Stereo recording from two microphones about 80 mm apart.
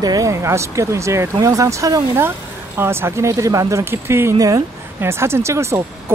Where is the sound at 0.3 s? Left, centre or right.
Right.